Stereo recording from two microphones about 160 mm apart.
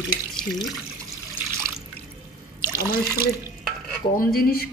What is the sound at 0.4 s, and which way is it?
Speech, centre (ahead or behind).